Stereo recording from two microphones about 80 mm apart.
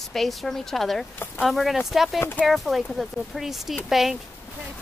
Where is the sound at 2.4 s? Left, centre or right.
Centre.